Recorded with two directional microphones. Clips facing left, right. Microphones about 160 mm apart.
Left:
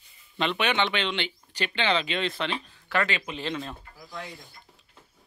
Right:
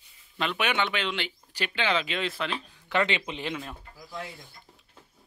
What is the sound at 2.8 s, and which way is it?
Speech, 20° right (ahead or behind).